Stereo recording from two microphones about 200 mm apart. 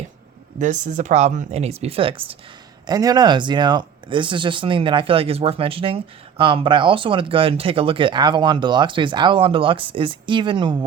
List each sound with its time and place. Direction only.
0.6 s speech: 35° right (ahead or behind)